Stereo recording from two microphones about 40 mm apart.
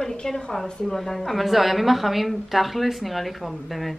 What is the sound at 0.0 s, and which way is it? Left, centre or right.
A woman's voice, centre.